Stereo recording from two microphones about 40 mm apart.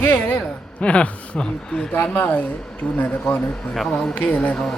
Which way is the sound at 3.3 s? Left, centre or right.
Centre.